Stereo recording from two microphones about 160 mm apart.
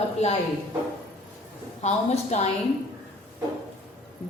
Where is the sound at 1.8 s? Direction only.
45° left (ahead or behind).